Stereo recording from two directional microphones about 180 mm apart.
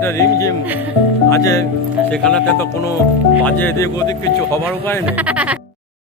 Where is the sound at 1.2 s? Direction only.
15° left (ahead or behind).